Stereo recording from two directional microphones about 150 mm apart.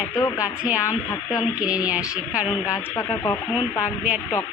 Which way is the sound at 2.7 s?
20° left (ahead or behind).